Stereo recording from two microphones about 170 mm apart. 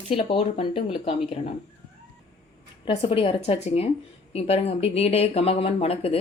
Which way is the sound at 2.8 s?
35° left (ahead or behind).